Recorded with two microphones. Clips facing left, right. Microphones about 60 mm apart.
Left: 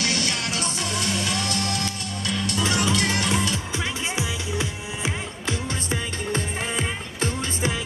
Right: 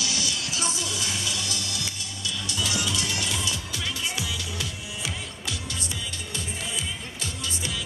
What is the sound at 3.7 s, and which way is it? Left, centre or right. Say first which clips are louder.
Music: left 4 dB; left.